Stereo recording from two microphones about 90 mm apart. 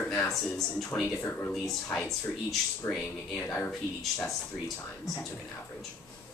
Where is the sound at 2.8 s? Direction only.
30° left (ahead or behind).